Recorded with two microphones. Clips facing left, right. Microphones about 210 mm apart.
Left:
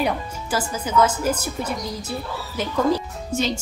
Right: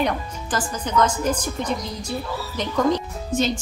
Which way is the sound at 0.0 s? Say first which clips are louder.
Even; 10° left (ahead or behind).